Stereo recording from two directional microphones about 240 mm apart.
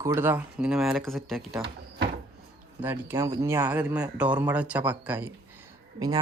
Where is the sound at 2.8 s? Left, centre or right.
Centre.